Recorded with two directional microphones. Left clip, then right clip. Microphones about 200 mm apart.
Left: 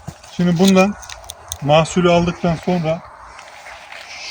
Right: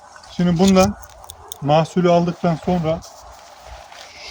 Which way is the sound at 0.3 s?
20° left (ahead or behind).